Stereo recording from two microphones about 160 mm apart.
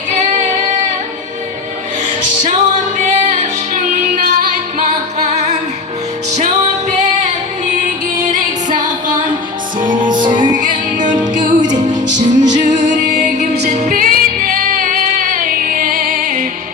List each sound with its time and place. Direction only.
2.4 s music: 50° right (ahead or behind)
8.7 s music: 55° right (ahead or behind)
10.0 s music: 30° right (ahead or behind)
10.5 s music: 55° right (ahead or behind)